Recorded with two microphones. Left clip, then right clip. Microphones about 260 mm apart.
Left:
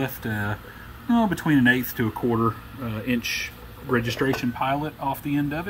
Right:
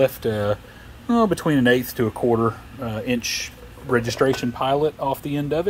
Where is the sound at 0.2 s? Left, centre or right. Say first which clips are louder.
Right 7 dB; centre.